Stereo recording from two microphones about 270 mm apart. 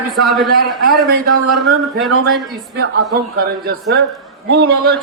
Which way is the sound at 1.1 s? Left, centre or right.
Right.